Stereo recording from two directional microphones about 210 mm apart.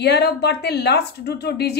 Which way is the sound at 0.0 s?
50° left (ahead or behind).